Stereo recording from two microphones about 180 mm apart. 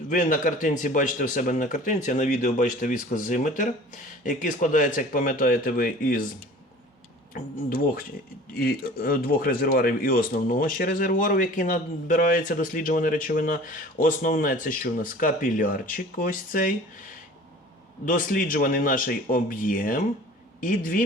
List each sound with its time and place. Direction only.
0.1 s speech: 45° left (ahead or behind)
7.3 s speech: 50° left (ahead or behind)
18.0 s speech: 50° left (ahead or behind)